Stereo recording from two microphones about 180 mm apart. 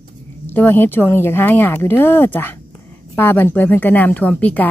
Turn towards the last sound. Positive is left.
turn(degrees=10)  # may be behind; listen again after turning